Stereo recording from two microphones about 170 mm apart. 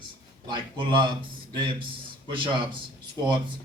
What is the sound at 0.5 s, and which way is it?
Speech, 30° right (ahead or behind).